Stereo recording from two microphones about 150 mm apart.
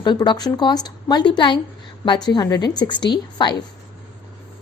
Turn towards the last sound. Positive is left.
turn(degrees=30)  # may be behind; listen again after turning